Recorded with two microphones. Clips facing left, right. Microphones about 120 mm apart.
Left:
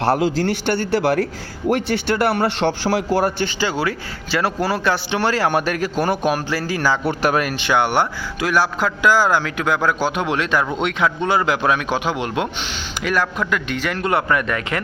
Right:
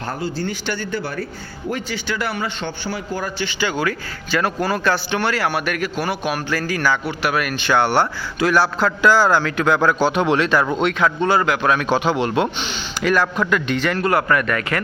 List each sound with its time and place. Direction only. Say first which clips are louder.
0.0 s a man's voice: left 7 dB; 85° left
0.6 s a man's voice: left 6 dB; 55° left (ahead or behind); by 1.3 s 90° left
1.7 s a man's voice: left 6 dB; 55° left (ahead or behind)
3.4 s speech: left 1 dB; 30° left (ahead or behind)
5.2 s a man's voice: left 6 dB; 35° left (ahead or behind)
6.3 s speech: left 1 dB; 25° left (ahead or behind)
7.1 s a man's voice: left 3 dB; 40° left (ahead or behind); by 14.8 s 20° left (ahead or behind)